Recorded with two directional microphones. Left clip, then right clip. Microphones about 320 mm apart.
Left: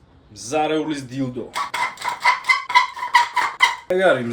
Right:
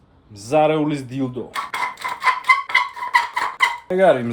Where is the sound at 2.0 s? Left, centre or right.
Centre.